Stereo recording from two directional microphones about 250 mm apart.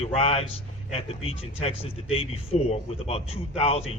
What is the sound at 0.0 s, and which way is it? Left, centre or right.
A man's voice, left.